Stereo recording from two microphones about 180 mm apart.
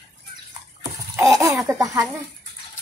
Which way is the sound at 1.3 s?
20° right (ahead or behind).